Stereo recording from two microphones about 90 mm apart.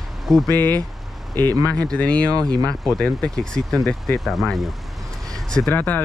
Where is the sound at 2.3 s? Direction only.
45° right (ahead or behind).